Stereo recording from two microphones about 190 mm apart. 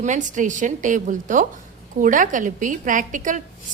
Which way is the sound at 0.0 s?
40° right (ahead or behind).